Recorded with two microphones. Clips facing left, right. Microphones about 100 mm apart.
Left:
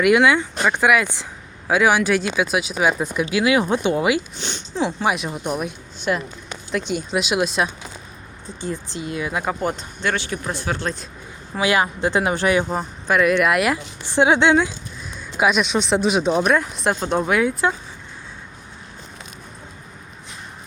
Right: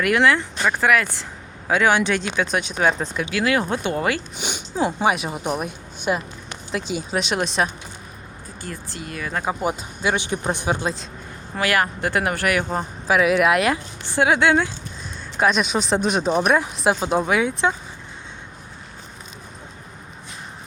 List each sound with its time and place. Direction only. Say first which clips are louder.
0.0 s speech: left 3 dB; 10° left (ahead or behind)
1.6 s speech: left 1 dB; 5° left (ahead or behind)
3.2 s speech: left 3 dB; 15° left (ahead or behind)
4.4 s speech: right 1 dB; 10° right (ahead or behind)
8.6 s speech: left 6 dB; 20° left (ahead or behind)
9.4 s speech: even; 10° right (ahead or behind)
11.6 s speech: left 2 dB; 20° left (ahead or behind)
12.6 s speech: even; centre (ahead or behind)
14.2 s speech: left 2 dB; 25° left (ahead or behind)
15.4 s speech: left 1 dB; 5° left (ahead or behind)